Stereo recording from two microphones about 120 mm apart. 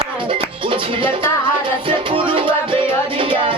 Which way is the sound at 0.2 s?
45° right (ahead or behind).